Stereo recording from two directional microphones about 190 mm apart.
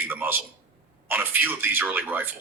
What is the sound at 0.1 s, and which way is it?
A man's voice, 10° right (ahead or behind).